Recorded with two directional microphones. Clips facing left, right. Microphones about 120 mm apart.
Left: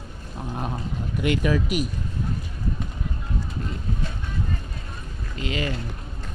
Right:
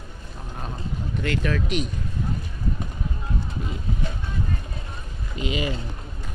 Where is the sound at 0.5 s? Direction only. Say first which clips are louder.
Left 3 dB; 20° left (ahead or behind).